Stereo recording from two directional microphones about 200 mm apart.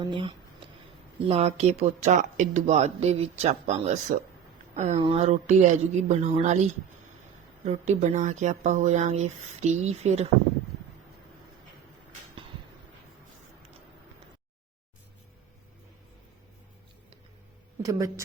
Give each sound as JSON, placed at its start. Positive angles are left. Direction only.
{"t": 0.0, "sound": "speech", "side_deg": -25}
{"t": 7.6, "sound": "speech", "side_deg": -35}
{"t": 17.8, "sound": "a woman's voice", "side_deg": -15}